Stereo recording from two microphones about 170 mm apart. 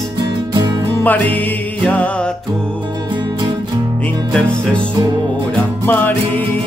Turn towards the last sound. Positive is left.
turn(degrees=10)  # may be behind; listen again after turning